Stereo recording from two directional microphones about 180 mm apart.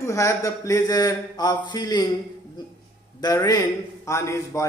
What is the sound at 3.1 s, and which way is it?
Speech, 20° left (ahead or behind).